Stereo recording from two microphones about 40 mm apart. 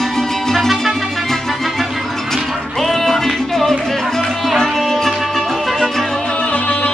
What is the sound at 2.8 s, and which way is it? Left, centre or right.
Music, centre.